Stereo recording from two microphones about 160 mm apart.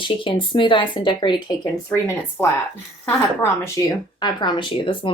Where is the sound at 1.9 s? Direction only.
15° left (ahead or behind).